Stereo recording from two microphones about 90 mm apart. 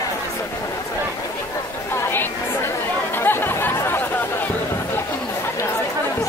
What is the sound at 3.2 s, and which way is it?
Chatter, 25° left (ahead or behind).